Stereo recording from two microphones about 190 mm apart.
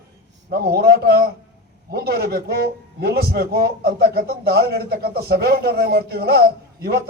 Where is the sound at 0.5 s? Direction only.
55° right (ahead or behind).